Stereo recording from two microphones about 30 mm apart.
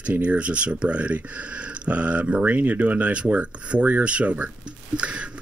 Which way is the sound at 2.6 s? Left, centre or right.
Right.